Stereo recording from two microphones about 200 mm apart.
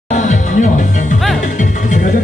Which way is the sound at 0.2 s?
40° left (ahead or behind).